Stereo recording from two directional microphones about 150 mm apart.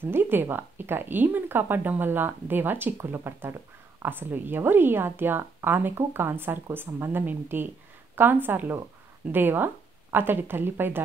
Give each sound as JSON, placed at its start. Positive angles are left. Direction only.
{"t": 0.0, "sound": "speech", "side_deg": -15}